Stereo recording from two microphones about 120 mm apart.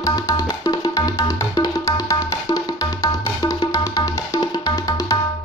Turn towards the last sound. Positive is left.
turn(degrees=30)  # may be behind; listen again after turning